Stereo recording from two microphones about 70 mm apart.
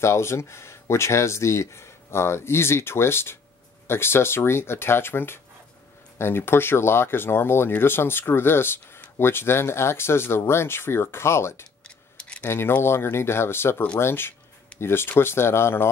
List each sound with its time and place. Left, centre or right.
0.0 s speech: left
12.2 s tick-tock: centre
12.4 s speech: left